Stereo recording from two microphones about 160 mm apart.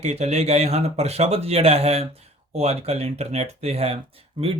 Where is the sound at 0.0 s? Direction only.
40° right (ahead or behind).